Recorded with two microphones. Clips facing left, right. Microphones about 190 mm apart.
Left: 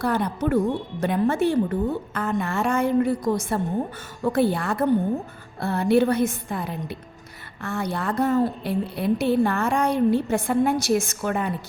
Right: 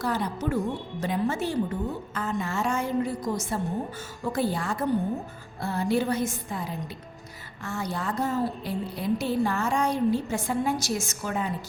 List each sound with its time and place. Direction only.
0.0 s a woman's voice: 60° left (ahead or behind)